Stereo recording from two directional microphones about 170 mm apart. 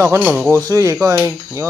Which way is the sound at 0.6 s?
20° right (ahead or behind).